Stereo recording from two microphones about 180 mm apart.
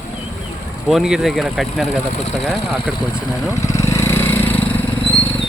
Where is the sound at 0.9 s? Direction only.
Centre (ahead or behind).